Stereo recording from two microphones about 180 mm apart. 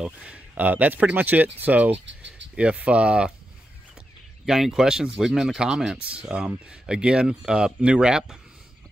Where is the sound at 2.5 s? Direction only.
5° right (ahead or behind).